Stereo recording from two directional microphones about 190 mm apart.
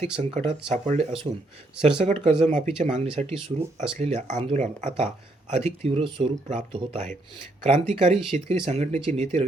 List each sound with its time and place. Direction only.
0.0 s speech: 40° right (ahead or behind)